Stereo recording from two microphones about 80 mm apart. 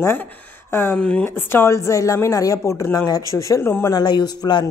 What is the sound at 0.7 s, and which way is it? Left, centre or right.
Speech, left.